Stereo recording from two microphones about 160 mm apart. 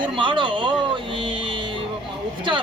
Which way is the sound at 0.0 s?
30° right (ahead or behind).